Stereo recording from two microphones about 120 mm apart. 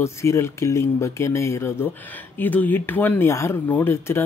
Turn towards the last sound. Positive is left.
turn(degrees=20)  # may be behind; listen again after turning